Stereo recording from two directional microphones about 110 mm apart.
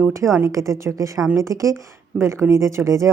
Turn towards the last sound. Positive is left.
turn(degrees=-25)  # may be behind; listen again after turning